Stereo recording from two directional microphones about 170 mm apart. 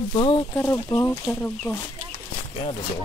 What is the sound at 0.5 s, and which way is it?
Speech, 15° left (ahead or behind).